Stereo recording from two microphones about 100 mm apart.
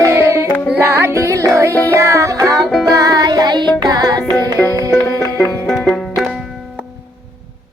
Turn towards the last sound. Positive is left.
turn(degrees=0)  # may be behind; listen again after turning